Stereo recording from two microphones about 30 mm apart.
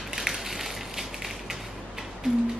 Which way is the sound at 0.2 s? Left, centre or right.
Centre.